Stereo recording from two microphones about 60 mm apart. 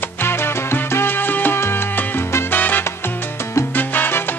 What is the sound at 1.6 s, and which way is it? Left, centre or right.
Salsa music, left.